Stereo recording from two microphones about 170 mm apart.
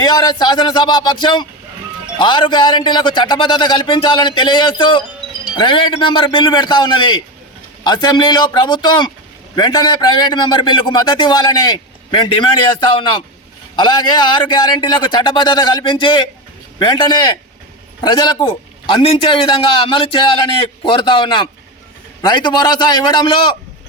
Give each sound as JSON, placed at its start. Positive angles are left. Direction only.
{"t": 0.0, "sound": "speech", "side_deg": 25}